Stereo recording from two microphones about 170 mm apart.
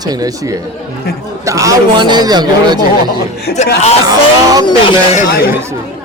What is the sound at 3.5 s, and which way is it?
Speech, 65° left (ahead or behind).